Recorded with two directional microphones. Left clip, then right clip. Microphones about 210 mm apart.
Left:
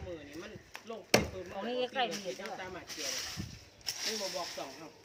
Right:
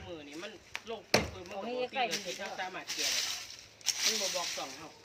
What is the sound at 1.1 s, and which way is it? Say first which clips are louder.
Chop: left 1 dB; 55° left (ahead or behind).